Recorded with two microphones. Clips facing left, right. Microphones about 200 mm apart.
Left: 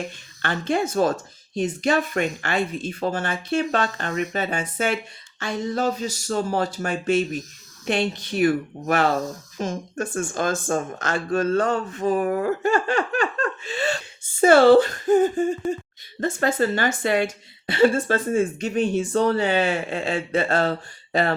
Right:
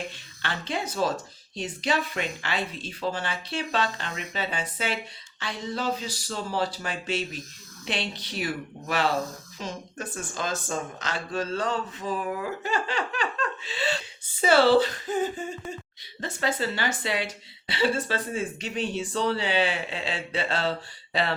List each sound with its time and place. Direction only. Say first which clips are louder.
0.4 s a woman's voice: left 8 dB; 50° left (ahead or behind)